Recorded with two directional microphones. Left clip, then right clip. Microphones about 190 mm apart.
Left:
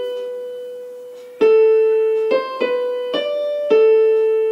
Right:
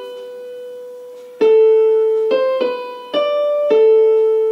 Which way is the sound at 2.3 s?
15° left (ahead or behind).